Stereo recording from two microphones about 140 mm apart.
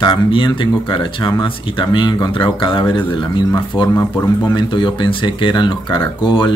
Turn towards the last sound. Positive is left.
turn(degrees=35)  # may be behind; listen again after turning